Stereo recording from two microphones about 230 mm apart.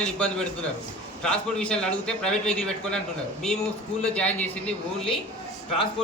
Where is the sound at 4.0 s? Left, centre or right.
Centre.